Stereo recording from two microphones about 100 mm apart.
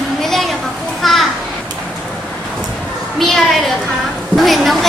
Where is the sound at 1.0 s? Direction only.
Centre (ahead or behind).